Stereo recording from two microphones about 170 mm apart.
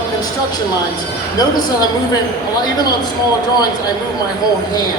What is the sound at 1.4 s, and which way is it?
Speech, 25° left (ahead or behind).